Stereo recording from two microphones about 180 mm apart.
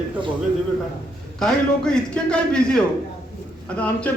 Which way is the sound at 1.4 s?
5° left (ahead or behind).